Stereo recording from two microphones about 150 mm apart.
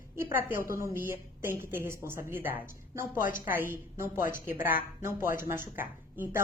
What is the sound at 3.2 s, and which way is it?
Speech, 65° left (ahead or behind).